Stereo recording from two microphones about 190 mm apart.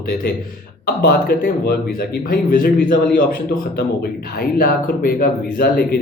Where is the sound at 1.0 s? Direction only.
55° left (ahead or behind).